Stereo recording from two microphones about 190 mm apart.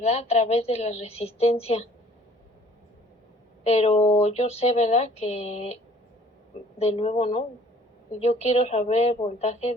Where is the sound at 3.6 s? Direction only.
35° left (ahead or behind).